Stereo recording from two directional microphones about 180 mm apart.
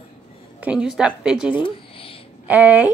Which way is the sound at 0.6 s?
5° right (ahead or behind).